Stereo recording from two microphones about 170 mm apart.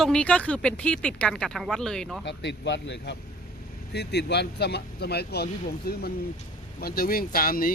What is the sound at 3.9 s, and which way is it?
Speech, 80° left.